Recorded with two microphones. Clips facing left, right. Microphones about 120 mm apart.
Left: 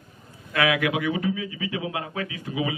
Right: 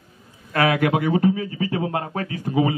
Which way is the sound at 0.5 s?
40° right (ahead or behind).